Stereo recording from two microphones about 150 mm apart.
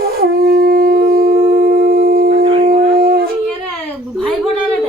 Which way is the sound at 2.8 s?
75° right (ahead or behind).